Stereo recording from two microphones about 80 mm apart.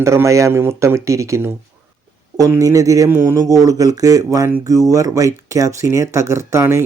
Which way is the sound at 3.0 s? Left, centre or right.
Right.